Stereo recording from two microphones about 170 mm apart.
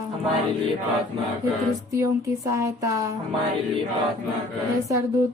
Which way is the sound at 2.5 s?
20° right (ahead or behind).